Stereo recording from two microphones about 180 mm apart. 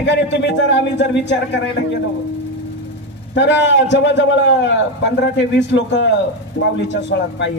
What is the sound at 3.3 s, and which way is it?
A man's voice, 85° left.